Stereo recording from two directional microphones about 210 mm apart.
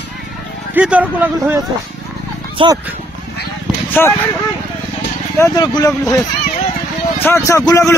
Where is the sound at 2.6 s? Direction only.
25° right (ahead or behind).